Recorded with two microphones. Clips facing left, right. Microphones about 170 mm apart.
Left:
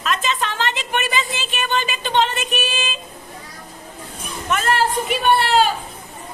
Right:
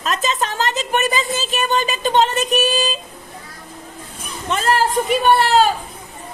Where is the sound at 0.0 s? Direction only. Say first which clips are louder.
Right 1 dB; 40° right (ahead or behind).